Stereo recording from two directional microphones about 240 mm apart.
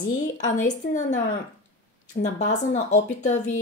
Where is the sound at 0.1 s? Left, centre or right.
Left.